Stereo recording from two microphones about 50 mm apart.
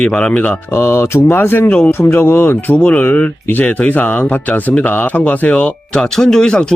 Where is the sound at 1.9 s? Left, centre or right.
Left.